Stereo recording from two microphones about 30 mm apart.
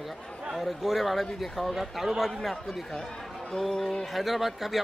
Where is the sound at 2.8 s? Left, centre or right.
Centre.